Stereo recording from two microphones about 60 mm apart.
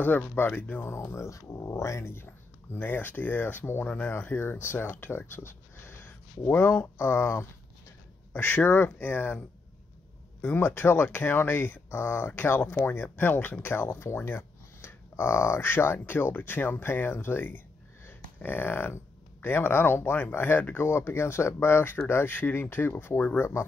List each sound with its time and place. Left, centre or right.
0.0 s speech: left
0.8 s speech: left
4.1 s speech: left
7.0 s speech: left
8.3 s speech: left
10.4 s speech: left
18.0 s a sound: left
19.4 s speech: left